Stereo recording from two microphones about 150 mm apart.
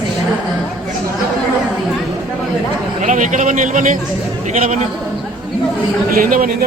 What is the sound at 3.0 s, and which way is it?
A man's voice, 55° right (ahead or behind).